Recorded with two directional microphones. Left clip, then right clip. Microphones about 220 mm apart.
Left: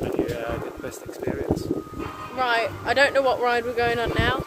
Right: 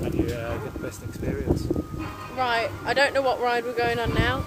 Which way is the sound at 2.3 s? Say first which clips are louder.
Left 2 dB; centre (ahead or behind).